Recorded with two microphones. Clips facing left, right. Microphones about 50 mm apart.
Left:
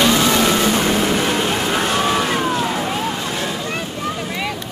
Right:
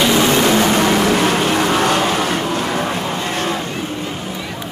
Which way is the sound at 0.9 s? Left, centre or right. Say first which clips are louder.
Right 3 dB; right.